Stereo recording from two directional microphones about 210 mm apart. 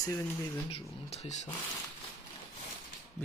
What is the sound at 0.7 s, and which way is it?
Speech, 30° left (ahead or behind).